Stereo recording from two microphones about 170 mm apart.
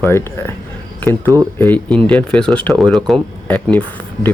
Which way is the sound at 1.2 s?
20° right (ahead or behind).